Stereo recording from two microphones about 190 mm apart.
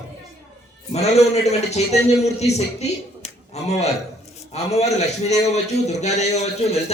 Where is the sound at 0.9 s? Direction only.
35° left (ahead or behind).